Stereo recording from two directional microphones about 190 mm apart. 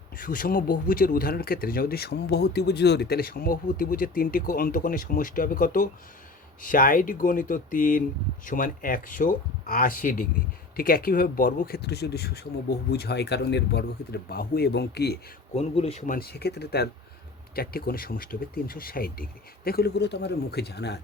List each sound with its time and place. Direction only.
0.2 s speech: 45° left (ahead or behind)
15.5 s speech: 30° left (ahead or behind)
16.1 s speech: 55° left (ahead or behind)